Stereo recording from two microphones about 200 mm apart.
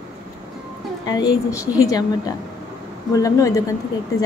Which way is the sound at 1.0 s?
20° left (ahead or behind).